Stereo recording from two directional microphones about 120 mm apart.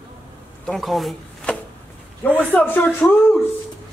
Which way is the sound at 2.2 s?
15° left (ahead or behind).